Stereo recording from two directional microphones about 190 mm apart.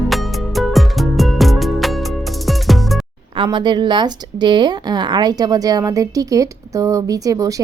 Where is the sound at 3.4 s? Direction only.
25° right (ahead or behind).